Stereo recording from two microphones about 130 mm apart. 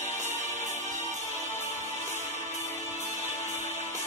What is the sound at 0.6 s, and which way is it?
Music, 65° right (ahead or behind).